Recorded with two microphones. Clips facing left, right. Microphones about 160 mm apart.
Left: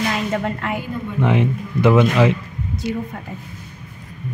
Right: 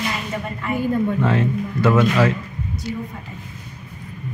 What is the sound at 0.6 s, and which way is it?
Speech, 90° left.